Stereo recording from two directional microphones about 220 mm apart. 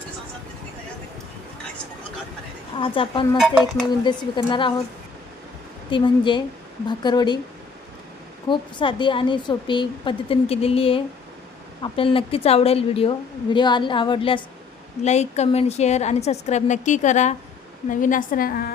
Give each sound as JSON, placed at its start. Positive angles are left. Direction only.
{"t": 2.7, "sound": "a woman's voice", "side_deg": 25}
{"t": 3.3, "sound": "dishes", "side_deg": 0}
{"t": 4.0, "sound": "a woman's voice", "side_deg": 20}
{"t": 5.9, "sound": "a woman's voice", "side_deg": 20}
{"t": 8.4, "sound": "a woman's voice", "side_deg": 20}